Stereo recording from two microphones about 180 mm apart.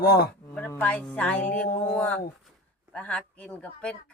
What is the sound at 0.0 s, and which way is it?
Speech, 55° left (ahead or behind).